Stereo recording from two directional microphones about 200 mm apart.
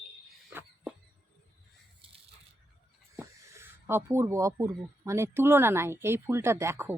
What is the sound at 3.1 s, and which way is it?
Speech, 15° right (ahead or behind).